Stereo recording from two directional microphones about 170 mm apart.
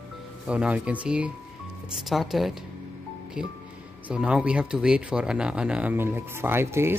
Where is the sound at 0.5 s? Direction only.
10° right (ahead or behind).